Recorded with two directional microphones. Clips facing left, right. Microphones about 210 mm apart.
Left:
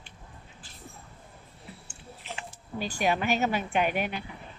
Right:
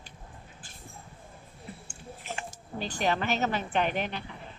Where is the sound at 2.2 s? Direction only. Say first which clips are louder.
Right 2 dB; 50° right (ahead or behind).